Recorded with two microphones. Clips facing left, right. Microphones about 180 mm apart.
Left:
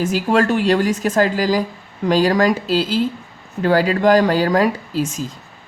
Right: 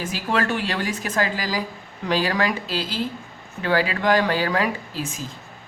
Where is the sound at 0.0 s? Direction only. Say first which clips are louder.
Left 8 dB; 45° left (ahead or behind).